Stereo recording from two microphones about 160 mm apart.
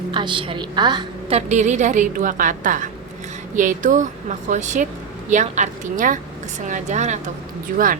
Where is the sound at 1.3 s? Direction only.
45° right (ahead or behind).